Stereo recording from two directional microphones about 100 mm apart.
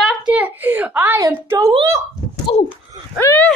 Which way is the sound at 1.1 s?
35° right (ahead or behind).